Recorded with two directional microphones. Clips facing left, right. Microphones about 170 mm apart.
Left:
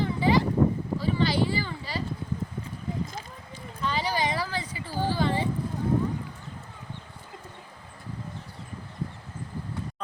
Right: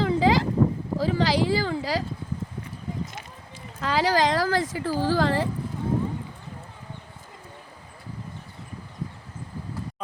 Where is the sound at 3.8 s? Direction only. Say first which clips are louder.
Right 6 dB; 90° right.